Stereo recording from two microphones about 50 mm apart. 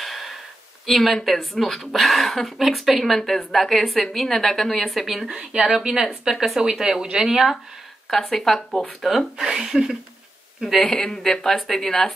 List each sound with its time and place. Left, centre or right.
0.0 s a sound: centre
0.8 s speech: centre
6.6 s speech: centre
8.1 s speech: centre
9.4 s speech: centre
10.8 s speech: centre